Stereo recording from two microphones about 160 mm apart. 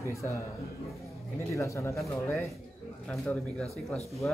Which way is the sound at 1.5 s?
20° left (ahead or behind).